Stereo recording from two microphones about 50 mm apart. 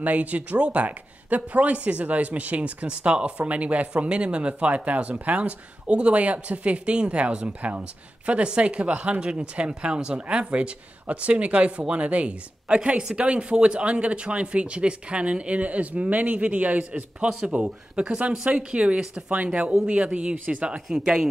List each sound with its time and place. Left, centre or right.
0.0 s speech: right; by 21.3 s centre